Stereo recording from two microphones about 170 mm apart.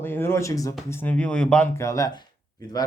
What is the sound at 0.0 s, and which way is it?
Speech, 15° left (ahead or behind).